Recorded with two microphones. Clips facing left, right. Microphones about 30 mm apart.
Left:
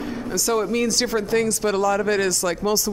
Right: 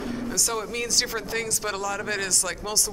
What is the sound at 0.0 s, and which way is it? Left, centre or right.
Speech, centre.